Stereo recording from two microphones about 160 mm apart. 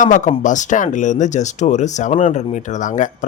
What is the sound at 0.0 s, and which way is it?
Speech, 50° left (ahead or behind).